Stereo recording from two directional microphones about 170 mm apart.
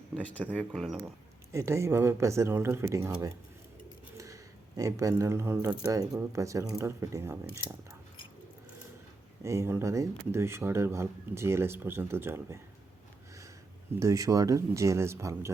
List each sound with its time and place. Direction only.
0.1 s speech: 10° left (ahead or behind)
1.5 s speech: 15° right (ahead or behind)
4.8 s speech: 20° right (ahead or behind)
9.4 s speech: 15° right (ahead or behind)
14.0 s speech: 20° right (ahead or behind)